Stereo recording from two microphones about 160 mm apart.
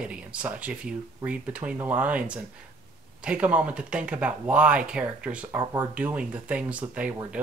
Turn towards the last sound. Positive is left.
turn(degrees=-10)  # may be behind; listen again after turning